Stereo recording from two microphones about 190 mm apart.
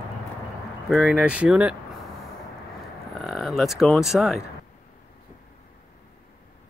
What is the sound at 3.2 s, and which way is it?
Speech, centre (ahead or behind).